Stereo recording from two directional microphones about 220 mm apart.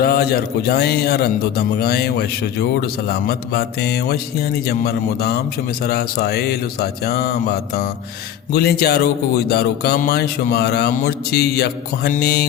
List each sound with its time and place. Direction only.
0.0 s a man's voice: 45° left (ahead or behind)